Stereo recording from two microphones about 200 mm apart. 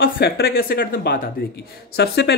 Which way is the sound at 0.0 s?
50° left (ahead or behind).